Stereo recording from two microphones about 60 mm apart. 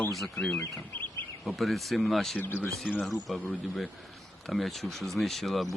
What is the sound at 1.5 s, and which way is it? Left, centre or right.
Speech, centre.